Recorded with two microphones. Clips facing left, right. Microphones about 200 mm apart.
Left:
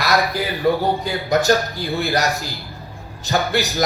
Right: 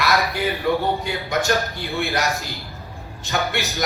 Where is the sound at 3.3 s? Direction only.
35° left (ahead or behind).